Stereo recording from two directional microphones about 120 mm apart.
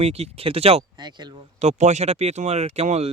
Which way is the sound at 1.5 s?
70° right (ahead or behind).